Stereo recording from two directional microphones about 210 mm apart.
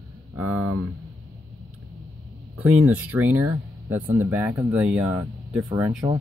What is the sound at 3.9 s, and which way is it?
Speech, 10° right (ahead or behind).